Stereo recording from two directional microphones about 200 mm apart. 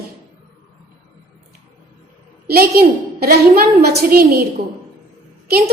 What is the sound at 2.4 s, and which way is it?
A woman's voice, 50° right (ahead or behind).